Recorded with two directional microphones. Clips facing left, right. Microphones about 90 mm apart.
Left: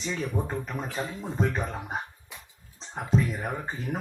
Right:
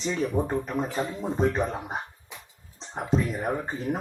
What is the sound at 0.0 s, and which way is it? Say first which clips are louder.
Speech: right 4 dB; 35° right (ahead or behind).